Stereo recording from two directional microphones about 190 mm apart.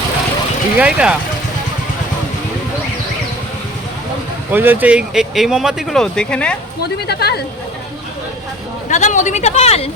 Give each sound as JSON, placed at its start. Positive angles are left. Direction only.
{"t": 0.8, "sound": "speech", "side_deg": -5}
{"t": 4.5, "sound": "speech", "side_deg": -10}
{"t": 6.8, "sound": "speech", "side_deg": 60}
{"t": 8.9, "sound": "speech", "side_deg": 40}